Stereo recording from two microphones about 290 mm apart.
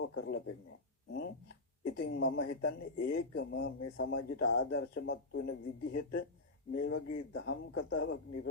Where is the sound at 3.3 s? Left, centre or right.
Left.